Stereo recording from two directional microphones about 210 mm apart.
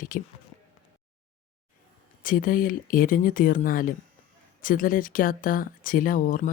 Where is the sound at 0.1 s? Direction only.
40° left (ahead or behind).